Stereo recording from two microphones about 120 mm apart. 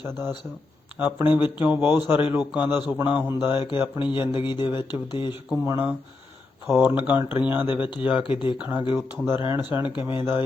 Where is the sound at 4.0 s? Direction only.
40° left (ahead or behind).